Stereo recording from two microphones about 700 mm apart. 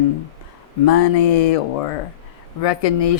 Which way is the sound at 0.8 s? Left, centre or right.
Left.